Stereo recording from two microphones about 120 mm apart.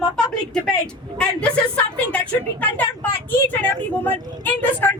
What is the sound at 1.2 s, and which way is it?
A woman's voice, 10° left (ahead or behind).